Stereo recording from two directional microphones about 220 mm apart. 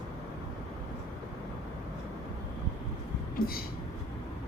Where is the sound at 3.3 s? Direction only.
40° left (ahead or behind).